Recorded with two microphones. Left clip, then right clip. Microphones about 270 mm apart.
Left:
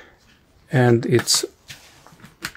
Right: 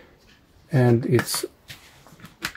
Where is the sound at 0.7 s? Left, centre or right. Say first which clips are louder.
Left 3 dB; left.